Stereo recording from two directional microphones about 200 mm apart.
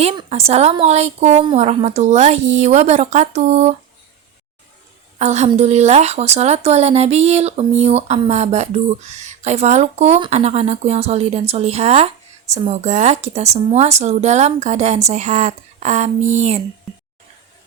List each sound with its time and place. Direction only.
0.0 s speech: 30° right (ahead or behind)
5.2 s speech: 35° right (ahead or behind)